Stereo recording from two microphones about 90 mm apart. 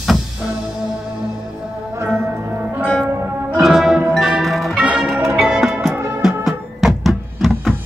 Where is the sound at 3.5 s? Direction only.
5° right (ahead or behind).